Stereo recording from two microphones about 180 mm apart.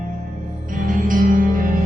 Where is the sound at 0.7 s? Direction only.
50° right (ahead or behind).